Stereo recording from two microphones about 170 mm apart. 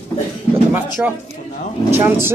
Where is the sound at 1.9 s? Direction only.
15° right (ahead or behind).